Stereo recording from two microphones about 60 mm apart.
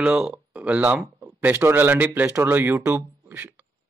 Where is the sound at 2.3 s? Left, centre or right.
Right.